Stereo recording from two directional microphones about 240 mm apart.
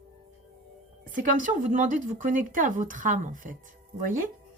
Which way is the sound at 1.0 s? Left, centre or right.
Right.